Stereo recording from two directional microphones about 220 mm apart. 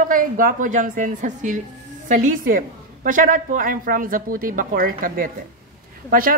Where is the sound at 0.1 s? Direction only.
40° right (ahead or behind).